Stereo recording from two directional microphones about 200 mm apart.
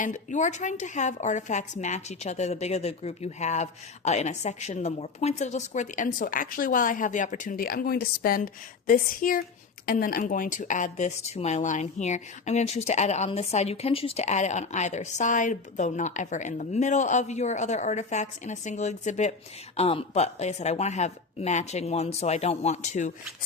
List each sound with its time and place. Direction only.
0.0 s speech: 35° left (ahead or behind)